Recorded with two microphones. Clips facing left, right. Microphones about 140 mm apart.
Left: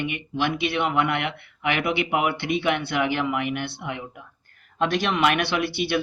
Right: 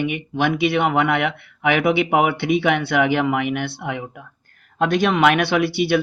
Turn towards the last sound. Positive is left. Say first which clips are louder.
# right 5 dB
turn(degrees=-55)  # may be behind; listen again after turning